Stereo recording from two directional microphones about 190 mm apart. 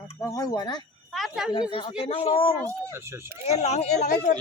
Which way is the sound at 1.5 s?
25° left (ahead or behind).